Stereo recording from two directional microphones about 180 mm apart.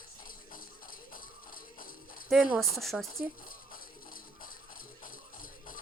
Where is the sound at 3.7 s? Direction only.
50° left (ahead or behind).